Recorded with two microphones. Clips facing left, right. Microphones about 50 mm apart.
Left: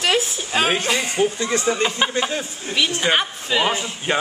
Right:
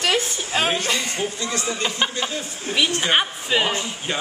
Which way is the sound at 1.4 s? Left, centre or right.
Left.